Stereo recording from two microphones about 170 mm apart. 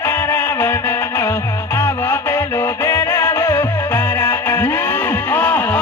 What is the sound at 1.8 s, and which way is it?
Music, 15° left (ahead or behind).